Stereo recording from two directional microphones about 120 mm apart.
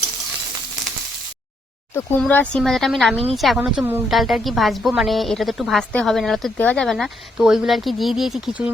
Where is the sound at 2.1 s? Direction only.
10° left (ahead or behind).